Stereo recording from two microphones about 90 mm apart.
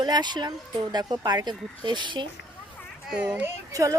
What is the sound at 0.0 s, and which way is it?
Speech, 50° right (ahead or behind).